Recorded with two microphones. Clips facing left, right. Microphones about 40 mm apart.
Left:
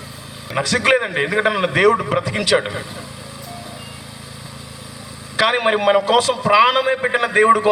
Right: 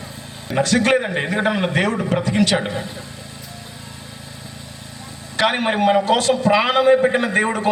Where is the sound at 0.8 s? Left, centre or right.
Centre.